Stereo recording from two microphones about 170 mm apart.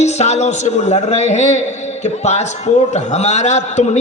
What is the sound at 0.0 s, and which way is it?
A man's voice, 40° left (ahead or behind).